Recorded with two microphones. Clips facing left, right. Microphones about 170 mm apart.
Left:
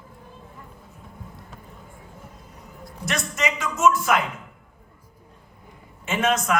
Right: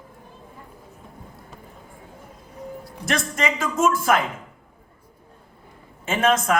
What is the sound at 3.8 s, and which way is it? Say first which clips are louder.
Speech: even; 30° right (ahead or behind).